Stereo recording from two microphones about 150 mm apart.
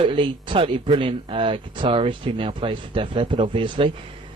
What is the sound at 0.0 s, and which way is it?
Speech, 35° right (ahead or behind).